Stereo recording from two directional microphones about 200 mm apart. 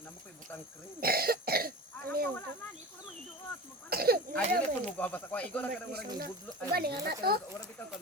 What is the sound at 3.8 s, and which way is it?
Speech, 50° right (ahead or behind).